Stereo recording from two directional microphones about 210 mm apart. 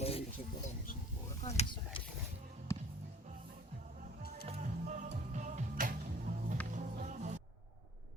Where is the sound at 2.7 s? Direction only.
15° left (ahead or behind).